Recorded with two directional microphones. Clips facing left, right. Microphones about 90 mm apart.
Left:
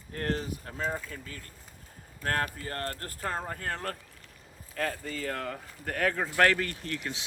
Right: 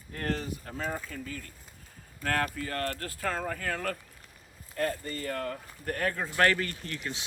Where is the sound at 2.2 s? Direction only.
35° left (ahead or behind).